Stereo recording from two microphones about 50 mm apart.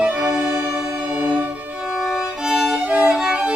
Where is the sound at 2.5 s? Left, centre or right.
Centre.